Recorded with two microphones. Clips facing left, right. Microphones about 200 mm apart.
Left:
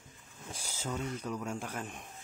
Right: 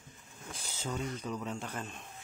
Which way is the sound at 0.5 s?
10° left (ahead or behind).